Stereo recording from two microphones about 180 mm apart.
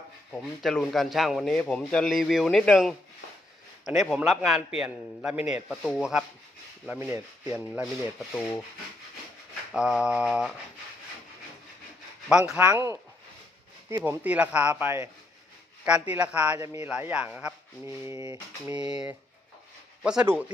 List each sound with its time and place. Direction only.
0.3 s speech: 5° left (ahead or behind); by 7.6 s 10° right (ahead or behind)
8.3 s sanding: 5° left (ahead or behind)
9.7 s speech: 5° right (ahead or behind)
12.3 s speech: 5° right (ahead or behind)
12.6 s speech: 15° right (ahead or behind)
14.0 s speech: 10° right (ahead or behind)
18.9 s speech: 5° right (ahead or behind)